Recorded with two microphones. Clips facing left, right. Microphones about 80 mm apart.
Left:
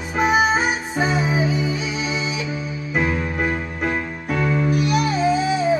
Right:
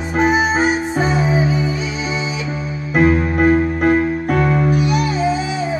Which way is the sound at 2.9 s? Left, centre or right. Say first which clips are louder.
Right 8 dB; right.